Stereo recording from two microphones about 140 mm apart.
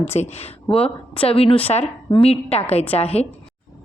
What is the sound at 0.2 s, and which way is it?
A woman's voice, 50° left (ahead or behind).